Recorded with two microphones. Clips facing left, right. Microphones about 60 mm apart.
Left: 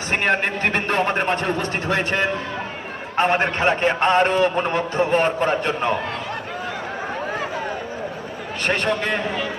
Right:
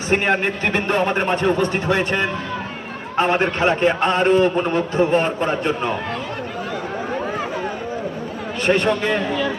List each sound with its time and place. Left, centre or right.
0.1 s a man's voice: centre
8.6 s a man's voice: centre